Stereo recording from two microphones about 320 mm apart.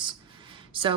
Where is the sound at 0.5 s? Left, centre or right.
Centre.